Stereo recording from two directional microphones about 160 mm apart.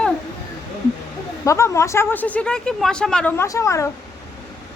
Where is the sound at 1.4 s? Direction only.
20° left (ahead or behind).